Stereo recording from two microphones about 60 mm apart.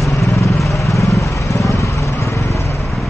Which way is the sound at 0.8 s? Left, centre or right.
Left.